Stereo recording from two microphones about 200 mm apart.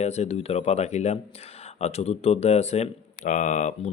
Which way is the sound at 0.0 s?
35° left (ahead or behind).